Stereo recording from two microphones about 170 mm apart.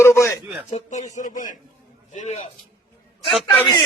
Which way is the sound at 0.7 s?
40° left (ahead or behind).